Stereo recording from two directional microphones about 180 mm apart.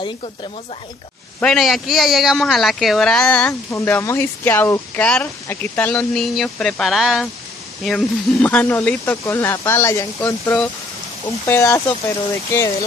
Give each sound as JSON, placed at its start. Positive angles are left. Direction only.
{"t": 1.4, "sound": "a man's voice", "side_deg": 0}